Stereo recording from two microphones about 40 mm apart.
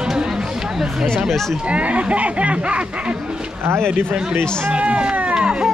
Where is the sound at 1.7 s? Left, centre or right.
Right.